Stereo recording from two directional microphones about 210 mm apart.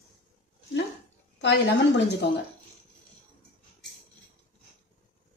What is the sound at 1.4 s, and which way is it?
Speech, 55° left (ahead or behind).